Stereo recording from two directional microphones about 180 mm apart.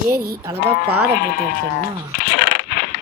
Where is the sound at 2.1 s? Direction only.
55° left (ahead or behind).